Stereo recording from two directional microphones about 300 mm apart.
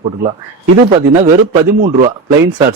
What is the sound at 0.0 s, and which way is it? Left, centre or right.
Speech, centre.